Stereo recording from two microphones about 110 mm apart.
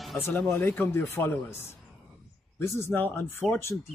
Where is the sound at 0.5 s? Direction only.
20° left (ahead or behind).